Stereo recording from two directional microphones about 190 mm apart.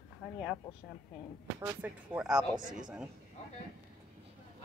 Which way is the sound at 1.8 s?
10° right (ahead or behind).